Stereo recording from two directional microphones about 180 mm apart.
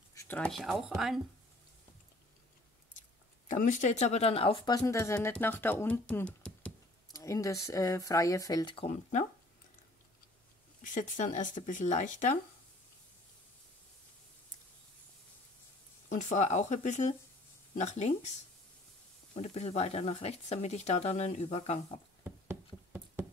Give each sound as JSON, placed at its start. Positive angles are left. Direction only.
{"t": 0.1, "sound": "a sound", "side_deg": 15}
{"t": 0.4, "sound": "speech", "side_deg": 0}
{"t": 2.9, "sound": "speech", "side_deg": 45}
{"t": 7.1, "sound": "speech", "side_deg": 20}
{"t": 10.8, "sound": "speech", "side_deg": 45}
{"t": 16.1, "sound": "speech", "side_deg": 40}
{"t": 19.3, "sound": "speech", "side_deg": 35}